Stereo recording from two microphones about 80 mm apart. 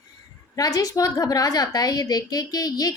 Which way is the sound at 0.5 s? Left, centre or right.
Left.